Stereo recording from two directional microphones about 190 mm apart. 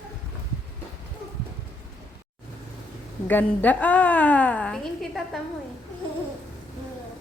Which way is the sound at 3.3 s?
10° left (ahead or behind).